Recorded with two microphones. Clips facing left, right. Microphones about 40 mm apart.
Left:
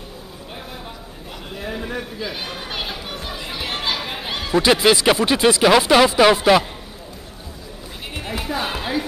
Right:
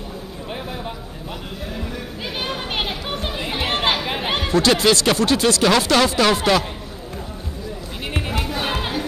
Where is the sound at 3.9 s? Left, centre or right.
Right.